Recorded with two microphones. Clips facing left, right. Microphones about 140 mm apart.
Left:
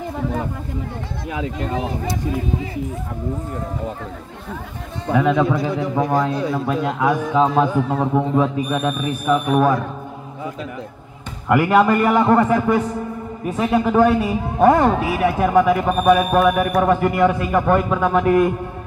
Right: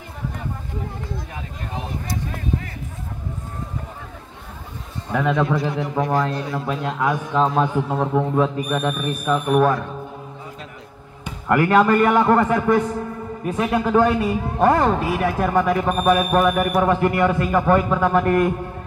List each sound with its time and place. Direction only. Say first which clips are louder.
1.3 s speech: left 9 dB; 90° left
5.1 s a man's voice: left 3 dB; centre (ahead or behind)
11.4 s a man's voice: left 1 dB; 5° left (ahead or behind)